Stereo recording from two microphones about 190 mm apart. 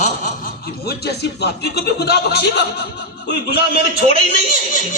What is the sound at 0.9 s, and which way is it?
Speech, 60° left (ahead or behind).